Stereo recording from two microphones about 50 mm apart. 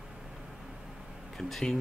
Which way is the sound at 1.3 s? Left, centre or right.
Centre.